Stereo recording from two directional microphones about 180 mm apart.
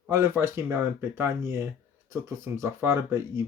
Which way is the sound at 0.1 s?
15° right (ahead or behind).